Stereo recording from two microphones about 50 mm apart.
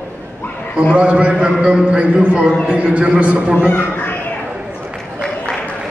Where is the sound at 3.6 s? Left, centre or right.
Left.